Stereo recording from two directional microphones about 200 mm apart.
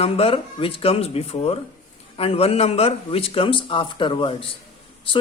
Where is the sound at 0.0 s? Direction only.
30° left (ahead or behind).